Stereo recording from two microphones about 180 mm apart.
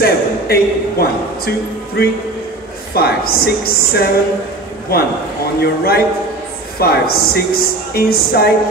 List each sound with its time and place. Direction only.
0.0 s speech: 60° left (ahead or behind)